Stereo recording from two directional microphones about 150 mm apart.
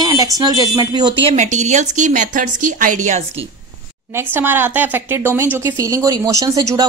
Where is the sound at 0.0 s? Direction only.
25° right (ahead or behind).